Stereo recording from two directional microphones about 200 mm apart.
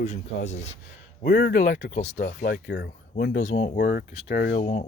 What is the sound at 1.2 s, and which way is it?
Speech, 45° left (ahead or behind).